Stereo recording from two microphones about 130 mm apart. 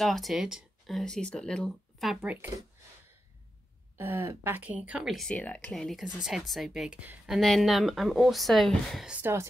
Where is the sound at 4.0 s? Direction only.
15° right (ahead or behind).